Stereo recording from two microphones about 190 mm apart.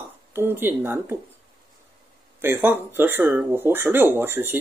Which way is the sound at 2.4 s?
10° right (ahead or behind).